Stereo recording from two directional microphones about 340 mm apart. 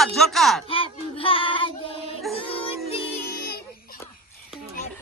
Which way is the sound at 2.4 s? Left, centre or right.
Centre.